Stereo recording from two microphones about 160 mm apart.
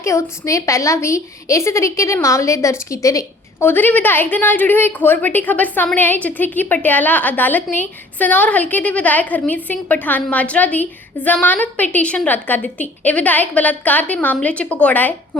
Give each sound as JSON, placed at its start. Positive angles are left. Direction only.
{"t": 0.0, "sound": "a woman's voice", "side_deg": 20}